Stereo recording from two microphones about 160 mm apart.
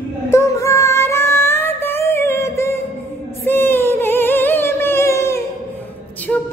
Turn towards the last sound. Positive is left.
turn(degrees=10)  # may be behind; listen again after turning